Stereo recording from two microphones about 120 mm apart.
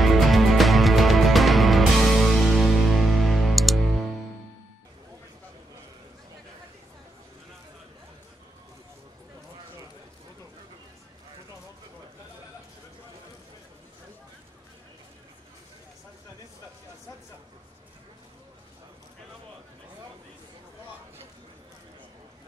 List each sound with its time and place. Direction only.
0.0 s music: centre (ahead or behind)